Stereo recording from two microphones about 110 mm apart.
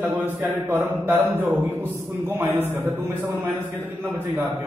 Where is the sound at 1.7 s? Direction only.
20° right (ahead or behind).